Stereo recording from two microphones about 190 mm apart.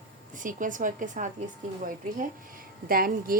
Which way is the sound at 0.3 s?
45° right (ahead or behind).